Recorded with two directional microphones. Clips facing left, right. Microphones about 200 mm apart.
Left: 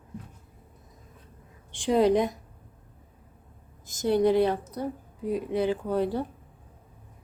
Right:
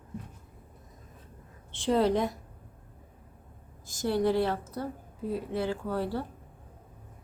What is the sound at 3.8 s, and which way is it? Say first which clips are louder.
A woman's voice: left 4 dB; 20° left (ahead or behind).